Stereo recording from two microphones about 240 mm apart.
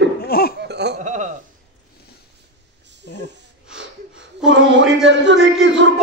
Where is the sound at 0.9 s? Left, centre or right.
Right.